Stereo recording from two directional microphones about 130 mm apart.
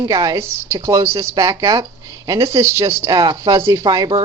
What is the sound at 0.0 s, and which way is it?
Speech, 30° right (ahead or behind).